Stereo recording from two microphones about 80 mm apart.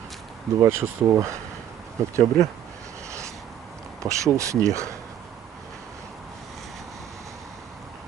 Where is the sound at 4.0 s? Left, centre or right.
Right.